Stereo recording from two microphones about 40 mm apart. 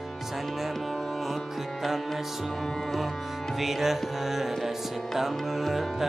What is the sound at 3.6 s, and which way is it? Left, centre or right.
Music, centre.